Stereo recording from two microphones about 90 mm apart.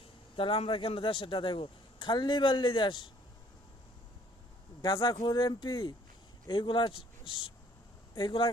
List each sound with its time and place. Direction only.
0.0 s speech: 75° left (ahead or behind); by 3.1 s 60° left (ahead or behind)
4.8 s speech: 50° left (ahead or behind)